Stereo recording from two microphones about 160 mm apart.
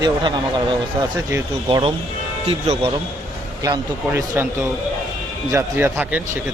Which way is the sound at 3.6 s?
20° right (ahead or behind).